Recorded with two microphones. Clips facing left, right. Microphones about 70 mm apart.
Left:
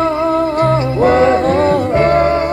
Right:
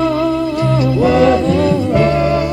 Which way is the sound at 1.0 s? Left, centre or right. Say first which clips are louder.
Left 1 dB; left.